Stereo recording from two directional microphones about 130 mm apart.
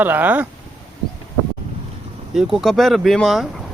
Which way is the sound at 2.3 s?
5° right (ahead or behind).